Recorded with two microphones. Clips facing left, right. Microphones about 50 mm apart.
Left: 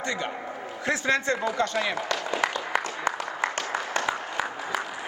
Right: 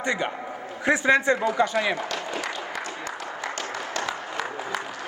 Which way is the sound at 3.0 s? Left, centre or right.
Left.